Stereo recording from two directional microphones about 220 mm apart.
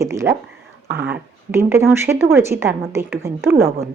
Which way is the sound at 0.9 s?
50° right (ahead or behind).